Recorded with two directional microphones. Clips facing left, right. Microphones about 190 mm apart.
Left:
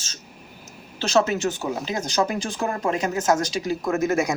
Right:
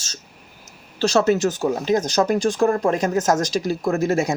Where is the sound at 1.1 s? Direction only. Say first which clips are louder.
Right 2 dB; 35° right (ahead or behind).